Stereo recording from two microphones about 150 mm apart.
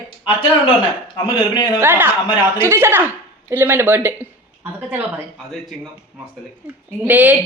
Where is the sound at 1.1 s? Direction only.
30° left (ahead or behind).